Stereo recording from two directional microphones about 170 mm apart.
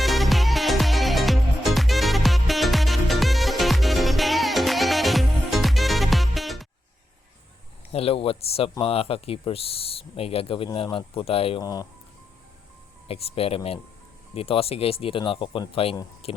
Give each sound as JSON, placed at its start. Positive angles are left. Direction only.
{"t": 0.0, "sound": "music", "side_deg": 0}
{"t": 7.9, "sound": "speech", "side_deg": 35}
{"t": 11.6, "sound": "speech", "side_deg": 20}
{"t": 13.1, "sound": "speech", "side_deg": 35}